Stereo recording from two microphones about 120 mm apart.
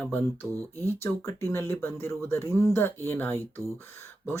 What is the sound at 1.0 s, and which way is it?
Speech, 20° left (ahead or behind).